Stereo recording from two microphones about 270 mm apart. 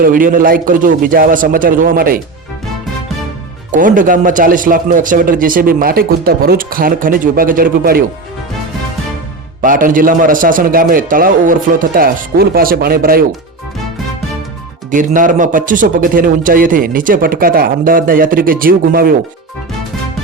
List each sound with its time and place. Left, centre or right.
0.0 s speech: right
3.7 s speech: right
9.6 s speech: right
14.8 s speech: right